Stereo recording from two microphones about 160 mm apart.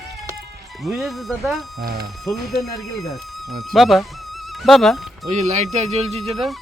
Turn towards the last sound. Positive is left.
turn(degrees=0)  # may be behind; listen again after turning